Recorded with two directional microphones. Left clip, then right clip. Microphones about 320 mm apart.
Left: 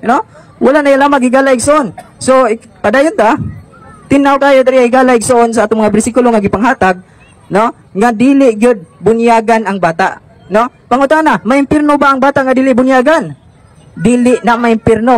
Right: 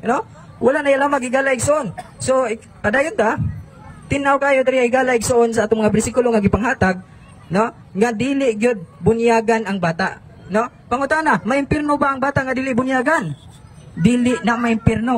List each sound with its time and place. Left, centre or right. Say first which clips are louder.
0.0 s a man's voice: left 9 dB; centre